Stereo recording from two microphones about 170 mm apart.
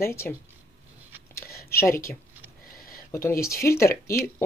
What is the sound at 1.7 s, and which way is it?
Speech, 15° left (ahead or behind).